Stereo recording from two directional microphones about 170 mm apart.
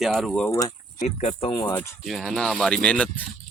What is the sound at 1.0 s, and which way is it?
Speech, 40° left (ahead or behind).